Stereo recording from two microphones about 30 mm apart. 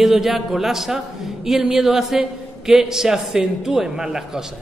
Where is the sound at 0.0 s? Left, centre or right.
Centre.